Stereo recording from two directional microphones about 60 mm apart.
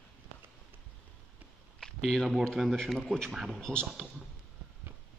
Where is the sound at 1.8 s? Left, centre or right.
Centre.